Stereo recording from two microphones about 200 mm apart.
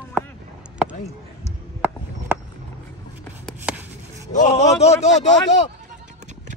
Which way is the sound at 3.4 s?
5° right (ahead or behind).